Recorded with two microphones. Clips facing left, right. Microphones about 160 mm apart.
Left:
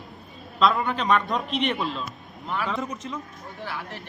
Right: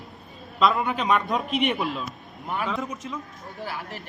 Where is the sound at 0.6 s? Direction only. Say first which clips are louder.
Even; centre (ahead or behind).